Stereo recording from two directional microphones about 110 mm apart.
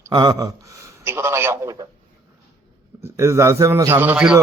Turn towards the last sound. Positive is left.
turn(degrees=-15)  # may be behind; listen again after turning